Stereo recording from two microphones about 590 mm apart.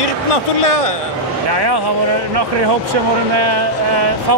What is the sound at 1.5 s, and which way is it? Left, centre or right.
Speech, right.